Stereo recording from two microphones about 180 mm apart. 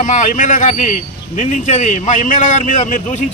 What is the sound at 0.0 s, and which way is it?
A man's voice, 45° left (ahead or behind).